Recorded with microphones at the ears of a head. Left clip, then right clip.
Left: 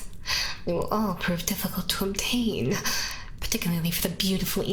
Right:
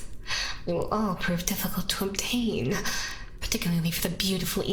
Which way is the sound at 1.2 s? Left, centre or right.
Centre.